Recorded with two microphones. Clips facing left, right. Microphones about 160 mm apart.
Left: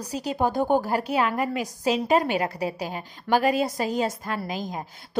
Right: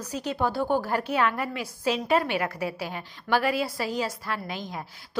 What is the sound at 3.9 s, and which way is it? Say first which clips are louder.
Speech: left 3 dB; 45° left (ahead or behind).